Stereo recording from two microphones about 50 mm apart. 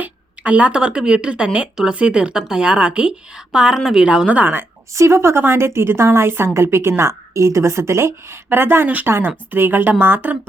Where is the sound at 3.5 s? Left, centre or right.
Centre.